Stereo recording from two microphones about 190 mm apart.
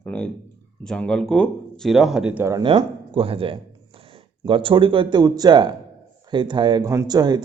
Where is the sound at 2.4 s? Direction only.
20° right (ahead or behind).